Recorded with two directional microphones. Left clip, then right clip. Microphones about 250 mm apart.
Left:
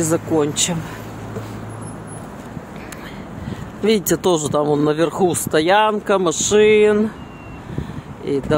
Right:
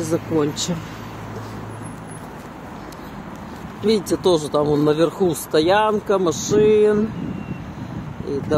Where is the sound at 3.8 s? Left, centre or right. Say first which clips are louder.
Left 2 dB; left.